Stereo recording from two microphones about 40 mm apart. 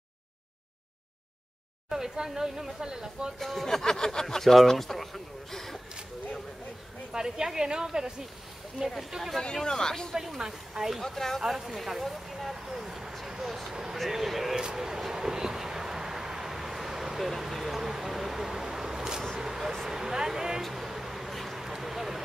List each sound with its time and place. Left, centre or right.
1.9 s speech: centre
3.3 s speech: centre
7.1 s speech: centre
9.4 s speech: centre
10.1 s speech: centre
11.0 s speech: centre
11.4 s speech: centre
13.3 s vehicle: centre
13.9 s speech: centre
14.5 s vehicle: centre
17.3 s a sound: centre
20.6 s vehicle: centre